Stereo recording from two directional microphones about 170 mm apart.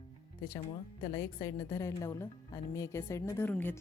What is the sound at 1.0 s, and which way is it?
A woman's voice, 20° left (ahead or behind).